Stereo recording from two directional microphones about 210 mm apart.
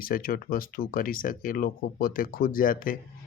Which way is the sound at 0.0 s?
45° left (ahead or behind).